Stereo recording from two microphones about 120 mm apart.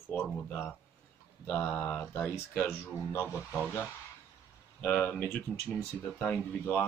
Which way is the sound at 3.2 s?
10° right (ahead or behind).